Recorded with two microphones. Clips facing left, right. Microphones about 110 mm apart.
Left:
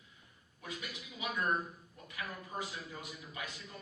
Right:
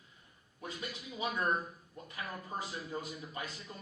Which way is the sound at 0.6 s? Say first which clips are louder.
Right 2 dB; 30° right (ahead or behind).